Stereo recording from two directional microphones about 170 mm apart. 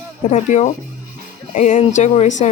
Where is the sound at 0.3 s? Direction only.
45° left (ahead or behind).